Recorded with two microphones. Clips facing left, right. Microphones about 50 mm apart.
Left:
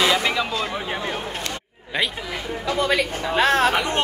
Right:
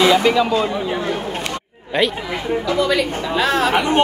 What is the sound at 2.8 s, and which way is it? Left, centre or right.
Speech, left.